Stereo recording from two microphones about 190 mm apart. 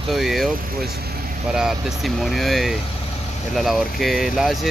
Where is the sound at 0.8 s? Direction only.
55° right (ahead or behind).